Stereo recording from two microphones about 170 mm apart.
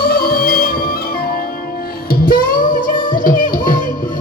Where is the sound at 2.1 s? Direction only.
55° left (ahead or behind).